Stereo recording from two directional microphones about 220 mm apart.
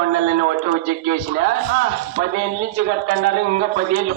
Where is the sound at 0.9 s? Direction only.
35° right (ahead or behind).